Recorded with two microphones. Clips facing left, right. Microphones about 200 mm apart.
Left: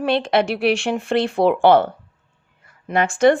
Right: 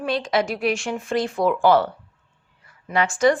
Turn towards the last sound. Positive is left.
turn(degrees=55)  # may be behind; listen again after turning